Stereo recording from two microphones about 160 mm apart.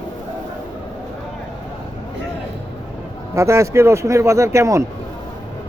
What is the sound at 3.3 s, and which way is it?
A man's voice, 20° right (ahead or behind).